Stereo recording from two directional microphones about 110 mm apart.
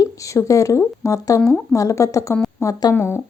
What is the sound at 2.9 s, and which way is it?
Speech, 20° left (ahead or behind).